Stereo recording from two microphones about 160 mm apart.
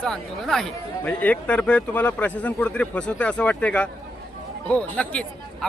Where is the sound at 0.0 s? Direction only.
5° left (ahead or behind).